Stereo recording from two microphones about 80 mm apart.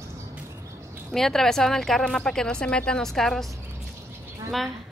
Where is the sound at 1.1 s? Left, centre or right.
Centre.